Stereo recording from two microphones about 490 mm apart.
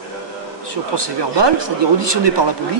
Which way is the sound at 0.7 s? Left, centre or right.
Right.